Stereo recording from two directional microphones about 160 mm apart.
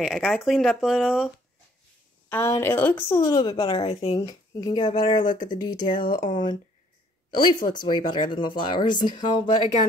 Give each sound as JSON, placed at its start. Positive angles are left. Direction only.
{"t": 0.0, "sound": "speech", "side_deg": 0}
{"t": 2.2, "sound": "speech", "side_deg": 10}
{"t": 4.2, "sound": "speech", "side_deg": 25}
{"t": 5.9, "sound": "speech", "side_deg": 60}
{"t": 6.3, "sound": "speech", "side_deg": 30}